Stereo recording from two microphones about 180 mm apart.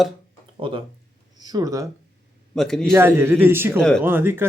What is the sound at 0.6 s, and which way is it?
Speech, 30° right (ahead or behind).